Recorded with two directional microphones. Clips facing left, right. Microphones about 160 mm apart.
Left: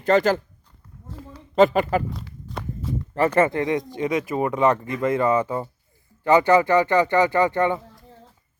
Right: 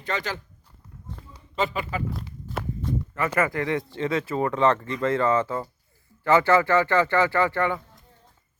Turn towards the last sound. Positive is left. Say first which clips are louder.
# left 3 dB
turn(degrees=20)  # may be behind; listen again after turning